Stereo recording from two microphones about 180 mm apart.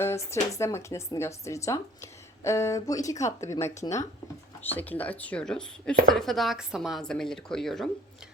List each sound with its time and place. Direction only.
0.0 s speech: 15° left (ahead or behind)